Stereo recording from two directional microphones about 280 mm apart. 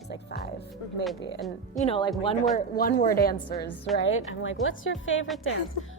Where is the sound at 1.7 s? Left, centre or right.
Centre.